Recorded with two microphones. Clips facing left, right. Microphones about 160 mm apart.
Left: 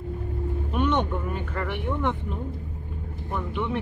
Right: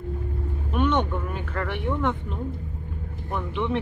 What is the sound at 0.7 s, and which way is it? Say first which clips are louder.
Vehicle: right 1 dB; 15° left (ahead or behind).